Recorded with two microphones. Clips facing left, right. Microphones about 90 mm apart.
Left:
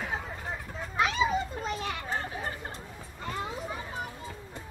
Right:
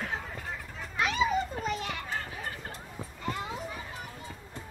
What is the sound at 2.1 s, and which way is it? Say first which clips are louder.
Chatter: left 3 dB; 30° left (ahead or behind).